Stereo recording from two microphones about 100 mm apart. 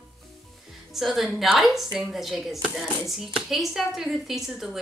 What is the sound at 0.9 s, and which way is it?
Speech, centre (ahead or behind).